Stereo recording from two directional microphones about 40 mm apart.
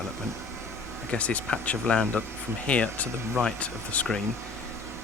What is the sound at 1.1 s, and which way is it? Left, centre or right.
Speech, left.